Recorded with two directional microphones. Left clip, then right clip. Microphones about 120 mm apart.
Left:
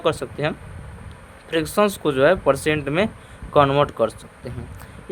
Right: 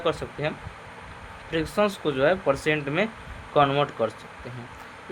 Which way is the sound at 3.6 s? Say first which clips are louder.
Left 5 dB; 90° left.